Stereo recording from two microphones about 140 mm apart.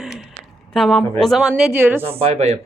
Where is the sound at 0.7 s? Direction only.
Centre (ahead or behind).